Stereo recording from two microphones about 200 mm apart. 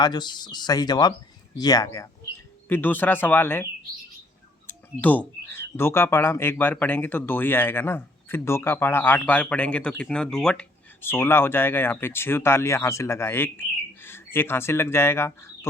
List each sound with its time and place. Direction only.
0.0 s speech: 20° left (ahead or behind)